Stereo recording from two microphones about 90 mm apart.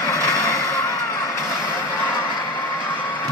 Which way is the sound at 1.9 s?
25° left (ahead or behind).